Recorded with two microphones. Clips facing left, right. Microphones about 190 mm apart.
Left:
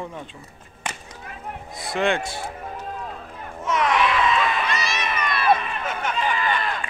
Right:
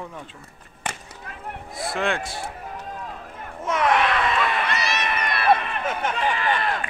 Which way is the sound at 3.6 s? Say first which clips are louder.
Even; 50° right (ahead or behind).